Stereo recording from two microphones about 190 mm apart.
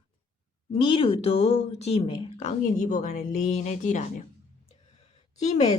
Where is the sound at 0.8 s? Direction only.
30° left (ahead or behind).